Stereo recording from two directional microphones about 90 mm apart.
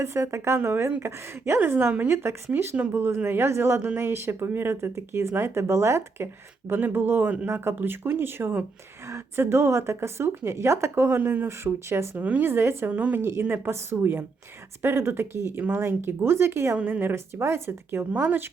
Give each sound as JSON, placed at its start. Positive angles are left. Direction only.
{"t": 0.0, "sound": "a woman's voice", "side_deg": -30}
{"t": 12.1, "sound": "speech", "side_deg": -15}
{"t": 12.5, "sound": "speech", "side_deg": -25}
{"t": 12.9, "sound": "speech", "side_deg": -15}
{"t": 16.7, "sound": "speech", "side_deg": -20}